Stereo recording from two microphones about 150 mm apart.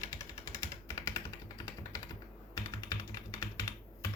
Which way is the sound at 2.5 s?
25° left (ahead or behind).